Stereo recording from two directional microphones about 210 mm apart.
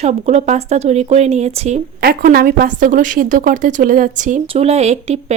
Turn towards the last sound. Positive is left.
turn(degrees=-30)  # may be behind; listen again after turning